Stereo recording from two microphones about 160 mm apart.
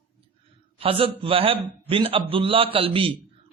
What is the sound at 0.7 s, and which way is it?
A man's voice, 35° right (ahead or behind).